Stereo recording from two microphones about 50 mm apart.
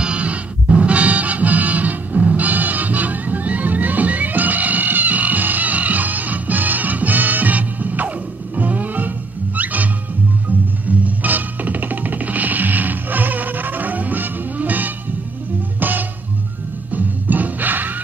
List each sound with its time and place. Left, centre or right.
0.0 s music: right
10.9 s music: right